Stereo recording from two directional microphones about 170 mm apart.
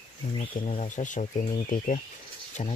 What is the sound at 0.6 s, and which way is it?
Speech, 45° left (ahead or behind).